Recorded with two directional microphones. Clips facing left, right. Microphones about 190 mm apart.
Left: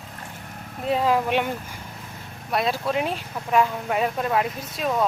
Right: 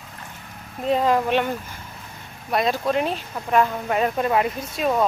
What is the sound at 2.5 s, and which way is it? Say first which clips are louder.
Speech: right 2 dB; centre (ahead or behind).